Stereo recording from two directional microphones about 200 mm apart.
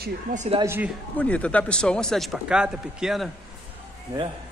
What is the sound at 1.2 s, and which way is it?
Speech, 5° left (ahead or behind).